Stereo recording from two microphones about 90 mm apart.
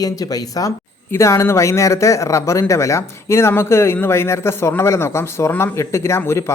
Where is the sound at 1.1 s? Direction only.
30° left (ahead or behind).